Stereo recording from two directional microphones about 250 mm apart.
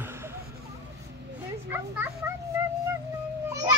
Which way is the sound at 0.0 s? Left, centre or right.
Centre.